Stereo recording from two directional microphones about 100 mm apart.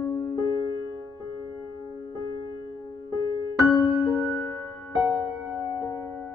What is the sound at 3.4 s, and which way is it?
Music, 40° left (ahead or behind).